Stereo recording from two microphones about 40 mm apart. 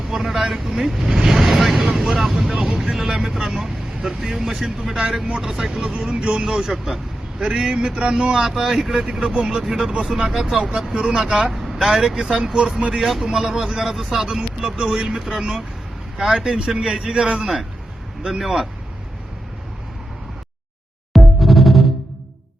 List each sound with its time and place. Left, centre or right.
0.1 s speech: centre
6.1 s a man's voice: right; by 7.4 s centre
7.4 s a man's voice: centre
11.0 s speech: centre
11.5 s vehicle: centre
11.9 s speech: centre
16.4 s speech: centre
21.1 s music: centre